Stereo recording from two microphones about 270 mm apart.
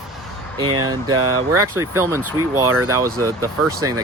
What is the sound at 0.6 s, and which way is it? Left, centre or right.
Speech, centre.